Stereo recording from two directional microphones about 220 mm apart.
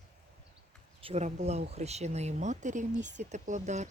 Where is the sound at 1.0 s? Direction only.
30° right (ahead or behind).